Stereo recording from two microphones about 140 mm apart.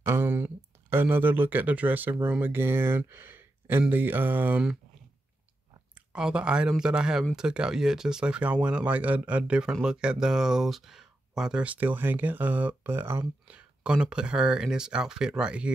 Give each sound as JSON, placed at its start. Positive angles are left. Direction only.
{"t": 0.0, "sound": "speech", "side_deg": -15}
{"t": 6.1, "sound": "a man's voice", "side_deg": -5}